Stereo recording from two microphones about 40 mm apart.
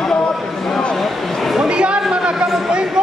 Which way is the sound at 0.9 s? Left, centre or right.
Centre.